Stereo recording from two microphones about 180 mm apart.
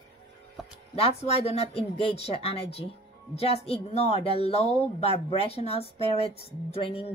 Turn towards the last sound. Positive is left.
turn(degrees=35)  # may be behind; listen again after turning